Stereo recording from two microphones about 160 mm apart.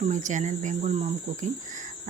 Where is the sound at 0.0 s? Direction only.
50° right (ahead or behind).